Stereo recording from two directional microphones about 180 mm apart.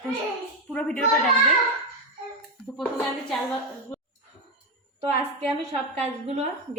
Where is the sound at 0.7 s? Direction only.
5° left (ahead or behind).